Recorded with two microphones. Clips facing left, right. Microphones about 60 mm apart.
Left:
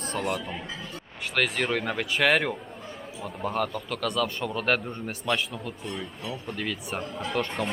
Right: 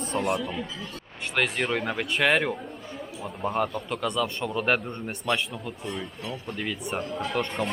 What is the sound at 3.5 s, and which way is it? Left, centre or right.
Speech, centre.